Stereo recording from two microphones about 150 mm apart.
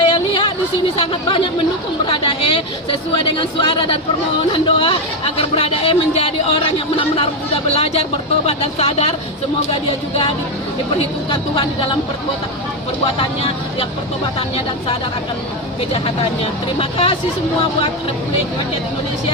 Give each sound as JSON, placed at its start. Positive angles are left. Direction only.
{"t": 0.0, "sound": "a sound", "side_deg": 35}
{"t": 0.9, "sound": "speech", "side_deg": 35}
{"t": 10.9, "sound": "speech", "side_deg": 35}
{"t": 13.1, "sound": "speech", "side_deg": 40}
{"t": 15.9, "sound": "speech", "side_deg": 40}